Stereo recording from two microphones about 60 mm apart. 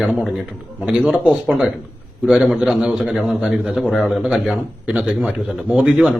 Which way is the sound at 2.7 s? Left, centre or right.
Centre.